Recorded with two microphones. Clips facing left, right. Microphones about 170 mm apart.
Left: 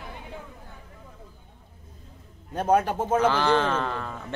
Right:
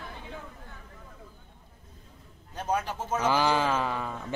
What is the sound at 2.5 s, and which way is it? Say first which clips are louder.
Speech: left 8 dB; 55° left (ahead or behind).